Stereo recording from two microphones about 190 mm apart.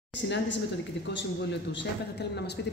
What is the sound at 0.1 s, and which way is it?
A woman's voice, 70° left (ahead or behind).